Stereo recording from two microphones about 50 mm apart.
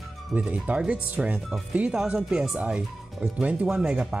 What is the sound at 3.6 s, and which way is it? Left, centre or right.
Speech, centre.